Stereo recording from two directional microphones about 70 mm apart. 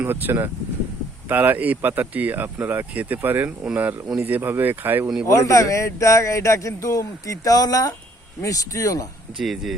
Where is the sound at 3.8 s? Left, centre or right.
Right.